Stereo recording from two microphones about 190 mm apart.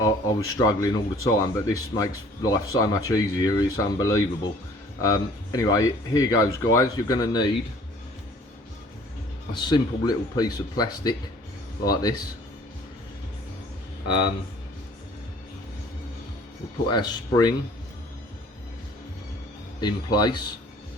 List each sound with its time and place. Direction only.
0.0 s a sound: 20° left (ahead or behind)
0.6 s speech: 20° left (ahead or behind)
9.5 s speech: 25° left (ahead or behind)
16.9 s speech: 20° left (ahead or behind)
19.8 s speech: 20° left (ahead or behind)